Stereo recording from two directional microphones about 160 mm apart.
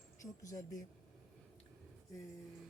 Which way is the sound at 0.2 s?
20° left (ahead or behind).